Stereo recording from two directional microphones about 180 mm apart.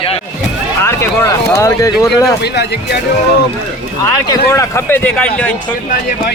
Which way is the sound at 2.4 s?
65° left (ahead or behind).